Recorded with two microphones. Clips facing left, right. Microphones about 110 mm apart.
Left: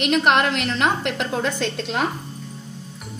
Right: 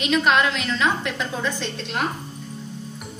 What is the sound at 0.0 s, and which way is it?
A woman's voice, 55° left (ahead or behind).